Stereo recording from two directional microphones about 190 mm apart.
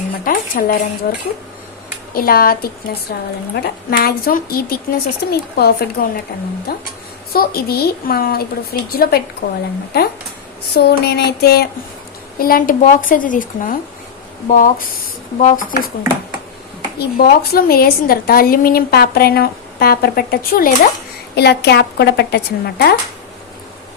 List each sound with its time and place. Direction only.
0.3 s a woman's voice: 50° left (ahead or behind)
10.8 s a woman's voice: 60° left (ahead or behind)
17.0 s a woman's voice: 55° left (ahead or behind)